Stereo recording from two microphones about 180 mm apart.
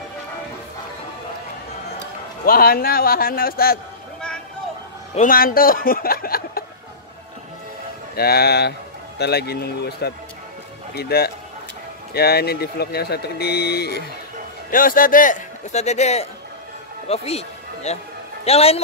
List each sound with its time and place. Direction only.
2.4 s speech: 55° left (ahead or behind)
5.1 s speech: 50° left (ahead or behind)
8.2 s speech: 60° left (ahead or behind)
14.7 s a man's voice: 50° left (ahead or behind); by 18.8 s 35° left (ahead or behind)